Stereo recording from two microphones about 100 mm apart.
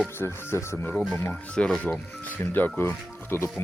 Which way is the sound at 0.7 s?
15° left (ahead or behind).